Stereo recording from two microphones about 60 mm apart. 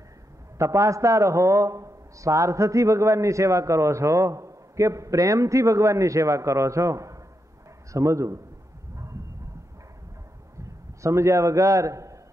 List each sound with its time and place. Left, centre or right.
0.6 s a man's voice: right
10.6 s a man's voice: right